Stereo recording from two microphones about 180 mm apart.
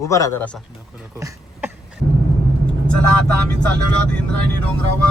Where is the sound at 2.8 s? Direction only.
5° left (ahead or behind).